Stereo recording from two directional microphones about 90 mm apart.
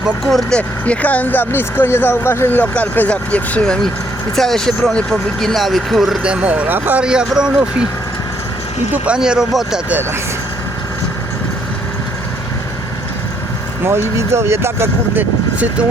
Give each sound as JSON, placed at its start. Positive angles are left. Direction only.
{"t": 0.3, "sound": "speech", "side_deg": 0}
{"t": 0.9, "sound": "speech", "side_deg": 15}
{"t": 7.0, "sound": "speech", "side_deg": -10}
{"t": 8.9, "sound": "speech", "side_deg": -10}
{"t": 13.8, "sound": "speech", "side_deg": -30}